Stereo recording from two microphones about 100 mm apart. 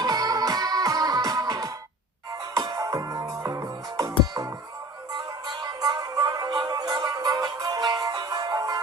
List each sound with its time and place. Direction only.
0.0 s music: 40° right (ahead or behind)
5.1 s music: 45° right (ahead or behind)